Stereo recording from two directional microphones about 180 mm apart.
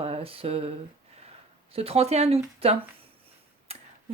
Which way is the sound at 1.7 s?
35° right (ahead or behind).